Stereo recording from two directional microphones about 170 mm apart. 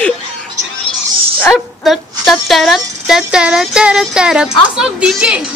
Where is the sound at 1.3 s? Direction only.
5° left (ahead or behind).